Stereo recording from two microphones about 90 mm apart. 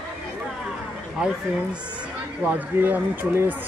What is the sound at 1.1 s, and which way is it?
Speech, 10° right (ahead or behind).